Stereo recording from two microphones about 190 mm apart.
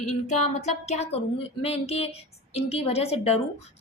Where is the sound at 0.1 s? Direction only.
35° left (ahead or behind).